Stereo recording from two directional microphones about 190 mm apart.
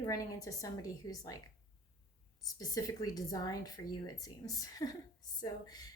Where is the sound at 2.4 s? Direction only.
20° left (ahead or behind).